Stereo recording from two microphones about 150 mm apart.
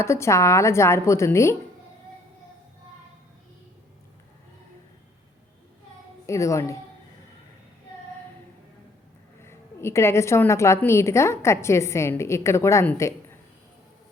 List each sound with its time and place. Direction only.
0.0 s a woman's voice: 20° left (ahead or behind)
6.2 s a woman's voice: 20° left (ahead or behind)
9.4 s a woman's voice: 15° left (ahead or behind)